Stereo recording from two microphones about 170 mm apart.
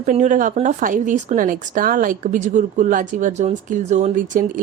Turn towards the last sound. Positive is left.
turn(degrees=-45)  # may be behind; listen again after turning